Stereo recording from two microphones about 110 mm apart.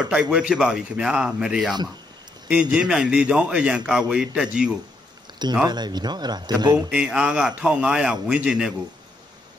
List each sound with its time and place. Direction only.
0.0 s a man's voice: 10° right (ahead or behind)
5.7 s speech: 40° right (ahead or behind)
6.9 s a man's voice: 5° right (ahead or behind)